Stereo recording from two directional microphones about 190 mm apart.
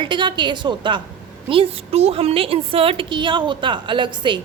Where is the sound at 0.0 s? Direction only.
25° right (ahead or behind).